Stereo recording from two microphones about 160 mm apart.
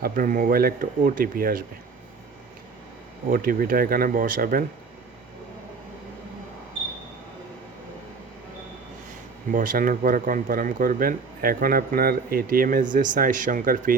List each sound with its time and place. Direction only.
0.0 s speech: 60° right (ahead or behind)
3.2 s speech: 60° right (ahead or behind)
9.5 s speech: 60° right (ahead or behind)